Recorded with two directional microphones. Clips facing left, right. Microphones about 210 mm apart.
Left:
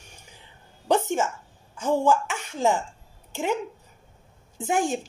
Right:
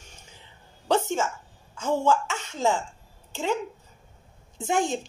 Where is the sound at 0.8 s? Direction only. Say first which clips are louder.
Left 1 dB; 15° left (ahead or behind).